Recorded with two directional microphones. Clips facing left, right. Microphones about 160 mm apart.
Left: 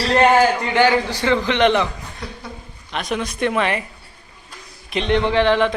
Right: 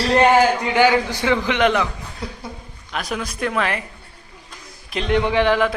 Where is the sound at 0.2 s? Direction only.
10° right (ahead or behind).